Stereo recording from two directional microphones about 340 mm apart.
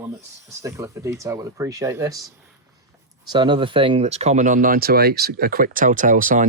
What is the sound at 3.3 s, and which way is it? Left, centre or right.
Speech, centre.